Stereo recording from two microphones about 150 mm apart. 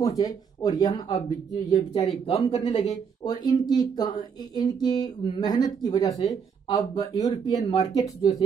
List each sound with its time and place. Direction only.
0.0 s speech: 25° left (ahead or behind); by 3.0 s 40° left (ahead or behind)
3.3 s speech: 25° left (ahead or behind)